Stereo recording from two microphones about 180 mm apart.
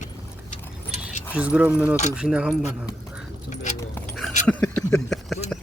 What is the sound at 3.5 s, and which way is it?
Speech, 40° left (ahead or behind).